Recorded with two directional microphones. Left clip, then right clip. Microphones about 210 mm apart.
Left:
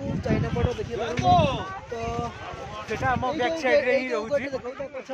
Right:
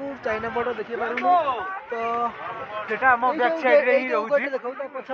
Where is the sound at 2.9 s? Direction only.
5° right (ahead or behind).